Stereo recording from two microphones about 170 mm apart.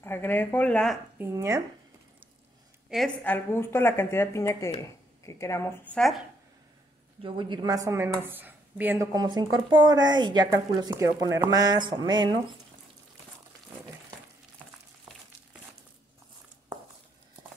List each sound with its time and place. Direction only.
0.0 s speech: 15° left (ahead or behind)
1.1 s a woman's voice: 15° right (ahead or behind)
2.9 s speech: 5° right (ahead or behind)
3.3 s speech: 15° left (ahead or behind)
5.9 s speech: centre (ahead or behind)
7.2 s a woman's voice: 30° right (ahead or behind); by 9.0 s 10° right (ahead or behind)
9.1 s a woman's voice: 25° right (ahead or behind)